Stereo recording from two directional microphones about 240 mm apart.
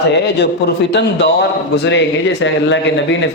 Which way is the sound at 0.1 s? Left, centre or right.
Left.